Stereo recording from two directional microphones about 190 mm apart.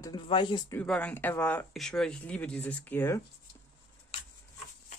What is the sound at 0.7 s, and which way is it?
Speech, 5° left (ahead or behind).